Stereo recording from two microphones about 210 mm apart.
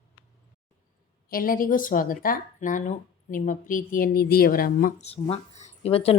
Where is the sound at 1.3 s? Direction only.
45° left (ahead or behind).